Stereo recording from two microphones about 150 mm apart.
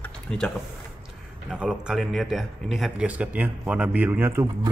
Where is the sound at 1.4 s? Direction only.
5° right (ahead or behind).